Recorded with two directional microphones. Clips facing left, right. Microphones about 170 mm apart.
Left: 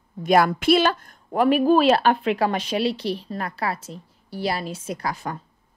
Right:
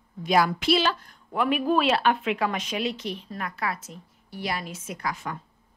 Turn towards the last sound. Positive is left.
turn(degrees=35)  # may be behind; listen again after turning